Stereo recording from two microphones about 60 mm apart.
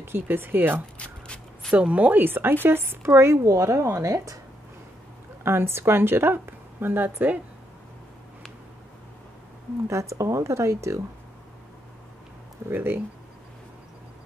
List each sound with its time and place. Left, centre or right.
0.0 s speech: right
0.9 s a sound: centre
1.7 s speech: right
3.4 s speech: right
5.4 s speech: right
9.8 s speech: right
12.6 s speech: right